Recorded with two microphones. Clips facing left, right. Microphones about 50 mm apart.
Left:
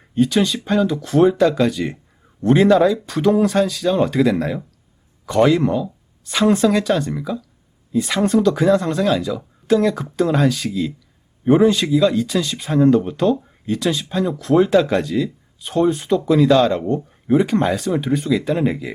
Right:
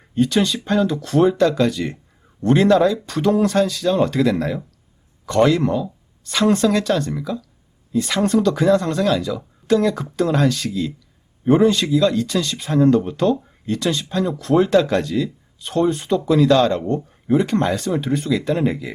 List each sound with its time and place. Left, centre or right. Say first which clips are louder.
0.1 s speech: left 1 dB; centre